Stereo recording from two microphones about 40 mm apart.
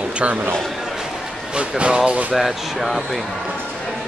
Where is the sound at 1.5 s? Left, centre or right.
Right.